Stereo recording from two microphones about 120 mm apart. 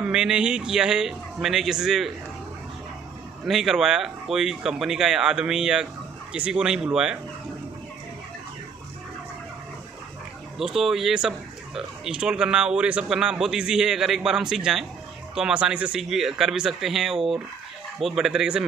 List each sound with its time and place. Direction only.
0.0 s speech: 5° right (ahead or behind)
3.4 s speech: 5° right (ahead or behind)
10.6 s speech: 5° right (ahead or behind)